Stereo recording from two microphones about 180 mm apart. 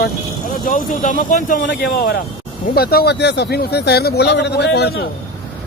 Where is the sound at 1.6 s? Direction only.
65° left (ahead or behind).